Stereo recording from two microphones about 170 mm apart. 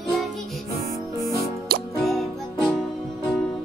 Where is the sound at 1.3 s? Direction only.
60° right (ahead or behind).